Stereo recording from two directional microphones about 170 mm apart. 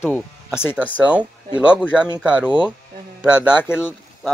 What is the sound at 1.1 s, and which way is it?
Speech, 10° right (ahead or behind).